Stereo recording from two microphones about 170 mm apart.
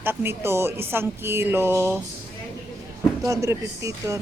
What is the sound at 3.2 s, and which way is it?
Speech, 20° right (ahead or behind).